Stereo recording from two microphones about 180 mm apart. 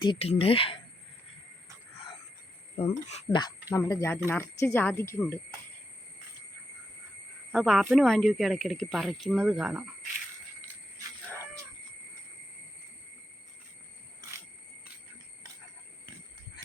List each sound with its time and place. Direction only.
0.0 s speech: 30° left (ahead or behind)
2.7 s speech: 35° left (ahead or behind)
3.3 s speech: 20° left (ahead or behind)
7.5 s speech: centre (ahead or behind)